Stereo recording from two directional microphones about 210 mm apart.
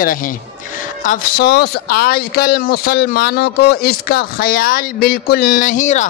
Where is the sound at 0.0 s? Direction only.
40° left (ahead or behind).